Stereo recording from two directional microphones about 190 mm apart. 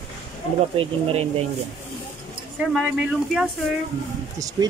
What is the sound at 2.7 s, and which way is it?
Speech, 5° right (ahead or behind).